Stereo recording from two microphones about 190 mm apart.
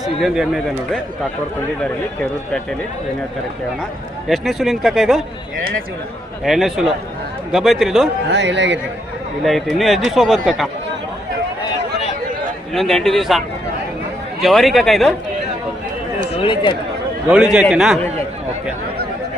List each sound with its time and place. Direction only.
0.0 s speech: centre (ahead or behind)
4.3 s speech: centre (ahead or behind)
6.4 s speech: centre (ahead or behind)
8.3 s speech: 65° right (ahead or behind)
9.4 s speech: centre (ahead or behind)
12.7 s speech: centre (ahead or behind)
14.4 s speech: centre (ahead or behind)
16.3 s speech: 25° left (ahead or behind)
17.2 s speech: 5° right (ahead or behind)